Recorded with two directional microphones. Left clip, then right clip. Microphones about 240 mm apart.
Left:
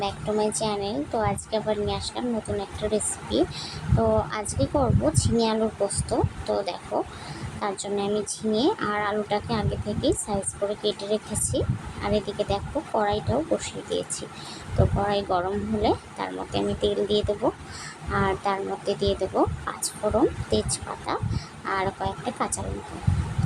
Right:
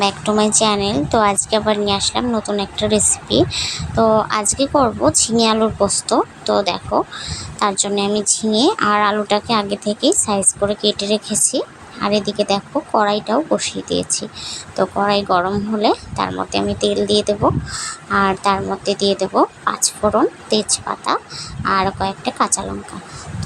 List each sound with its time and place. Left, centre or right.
0.0 s speech: right